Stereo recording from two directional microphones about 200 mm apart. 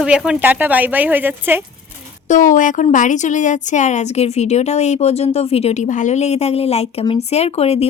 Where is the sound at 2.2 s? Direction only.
40° left (ahead or behind).